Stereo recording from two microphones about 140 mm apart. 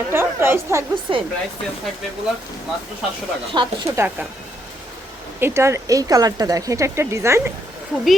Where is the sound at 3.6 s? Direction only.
35° right (ahead or behind).